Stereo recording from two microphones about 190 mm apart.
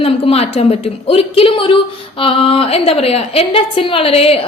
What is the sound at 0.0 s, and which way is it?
A woman's voice, 30° left (ahead or behind).